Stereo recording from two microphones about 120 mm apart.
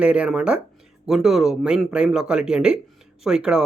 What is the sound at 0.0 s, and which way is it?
Speech, 10° right (ahead or behind).